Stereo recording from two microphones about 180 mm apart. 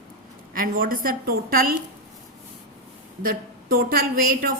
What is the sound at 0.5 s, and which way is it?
A woman's voice, 50° right (ahead or behind).